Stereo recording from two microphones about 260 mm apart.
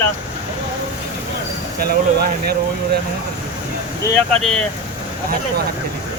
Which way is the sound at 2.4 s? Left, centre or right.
Right.